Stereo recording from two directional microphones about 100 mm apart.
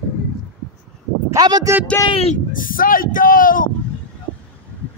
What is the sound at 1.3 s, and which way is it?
Speech, 40° right (ahead or behind).